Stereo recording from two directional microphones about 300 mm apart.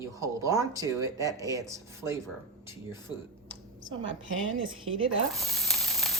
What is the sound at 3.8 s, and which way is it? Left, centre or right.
Speech, right.